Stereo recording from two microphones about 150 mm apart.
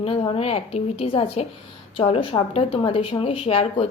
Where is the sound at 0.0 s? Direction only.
40° left (ahead or behind).